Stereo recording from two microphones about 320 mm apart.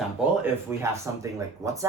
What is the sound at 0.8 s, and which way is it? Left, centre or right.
Speech, centre.